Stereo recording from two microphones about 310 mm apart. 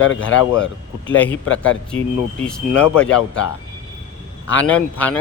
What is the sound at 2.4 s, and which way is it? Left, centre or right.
Speech, centre.